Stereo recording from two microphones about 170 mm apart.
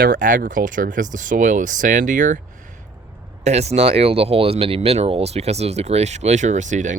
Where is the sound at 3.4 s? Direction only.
40° right (ahead or behind).